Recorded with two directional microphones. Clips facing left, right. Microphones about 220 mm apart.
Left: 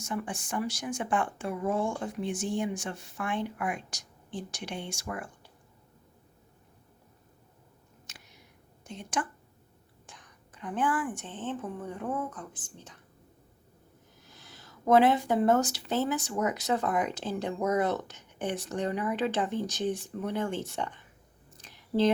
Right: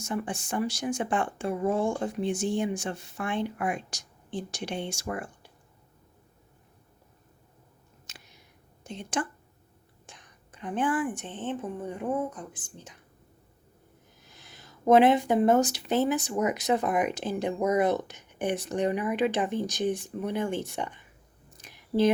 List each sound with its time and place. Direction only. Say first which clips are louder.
0.0 s speech: right 3 dB; 25° right (ahead or behind)
8.9 s speech: right 2 dB; 25° right (ahead or behind)
14.3 s speech: even; 20° right (ahead or behind)
21.6 s a sound: right 2 dB; 10° right (ahead or behind)